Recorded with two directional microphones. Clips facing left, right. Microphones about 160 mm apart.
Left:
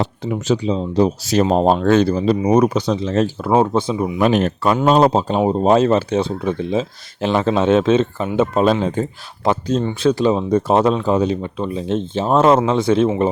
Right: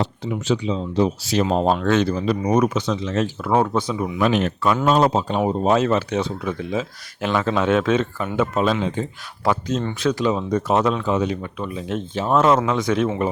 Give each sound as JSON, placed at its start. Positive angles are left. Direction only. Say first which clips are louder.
{"t": 0.0, "sound": "speech", "louder": "left 3 dB", "side_deg": 50}
{"t": 3.5, "sound": "speech", "louder": "left 4 dB", "side_deg": 25}
{"t": 4.2, "sound": "speech", "louder": "left 3 dB", "side_deg": 40}
{"t": 8.6, "sound": "speech", "louder": "left 5 dB", "side_deg": 40}
{"t": 9.4, "sound": "speech", "louder": "left 4 dB", "side_deg": 30}